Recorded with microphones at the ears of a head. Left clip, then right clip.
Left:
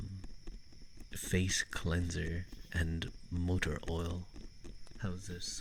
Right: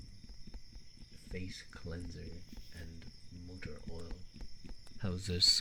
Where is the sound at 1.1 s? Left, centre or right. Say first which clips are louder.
Left 12 dB; left.